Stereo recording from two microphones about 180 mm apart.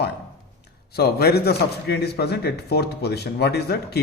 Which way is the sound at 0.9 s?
60° left (ahead or behind).